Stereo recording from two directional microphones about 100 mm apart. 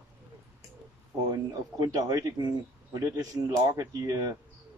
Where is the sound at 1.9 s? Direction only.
40° right (ahead or behind).